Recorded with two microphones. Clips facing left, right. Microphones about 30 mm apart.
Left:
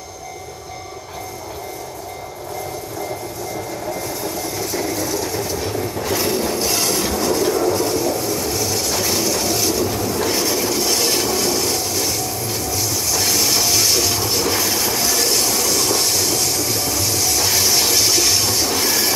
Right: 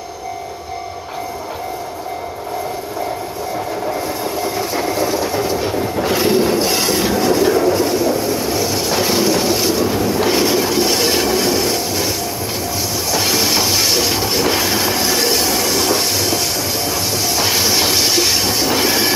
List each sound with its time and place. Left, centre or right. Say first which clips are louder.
3.5 s train: right 6 dB; right
13.1 s train: right 4 dB; right